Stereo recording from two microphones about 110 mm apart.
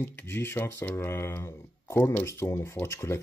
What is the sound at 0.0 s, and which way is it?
Speech, 20° left (ahead or behind).